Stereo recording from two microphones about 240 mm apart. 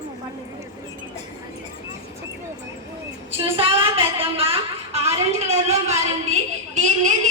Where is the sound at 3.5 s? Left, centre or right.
Right.